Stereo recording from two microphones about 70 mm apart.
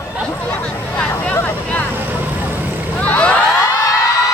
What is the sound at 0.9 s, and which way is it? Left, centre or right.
Vehicle, centre.